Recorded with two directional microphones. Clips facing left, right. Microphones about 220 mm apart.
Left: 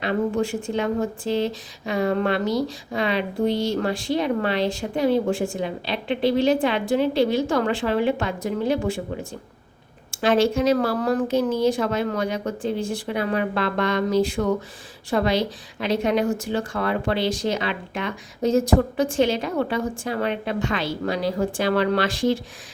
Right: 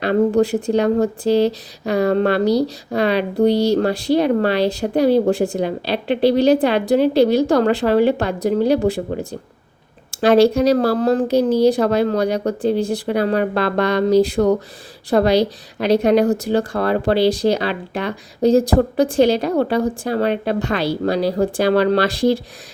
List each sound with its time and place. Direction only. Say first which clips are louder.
0.0 s speech: right 7 dB; 40° right (ahead or behind)